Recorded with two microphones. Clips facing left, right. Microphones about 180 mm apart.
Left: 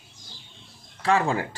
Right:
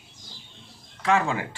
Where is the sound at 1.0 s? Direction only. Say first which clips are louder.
Left 1 dB; 35° left (ahead or behind).